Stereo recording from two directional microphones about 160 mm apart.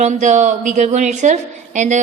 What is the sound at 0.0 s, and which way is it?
A woman's voice, 50° right (ahead or behind).